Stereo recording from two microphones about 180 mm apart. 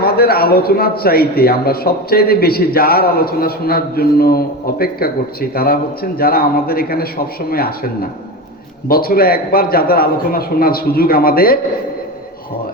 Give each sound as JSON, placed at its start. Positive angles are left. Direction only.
{"t": 0.0, "sound": "a man's voice", "side_deg": 60}
{"t": 8.9, "sound": "a man's voice", "side_deg": 55}